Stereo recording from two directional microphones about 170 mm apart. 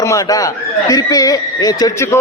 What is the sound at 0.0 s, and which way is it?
A man's voice, 20° left (ahead or behind).